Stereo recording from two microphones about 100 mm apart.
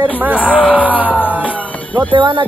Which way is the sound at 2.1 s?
55° right (ahead or behind).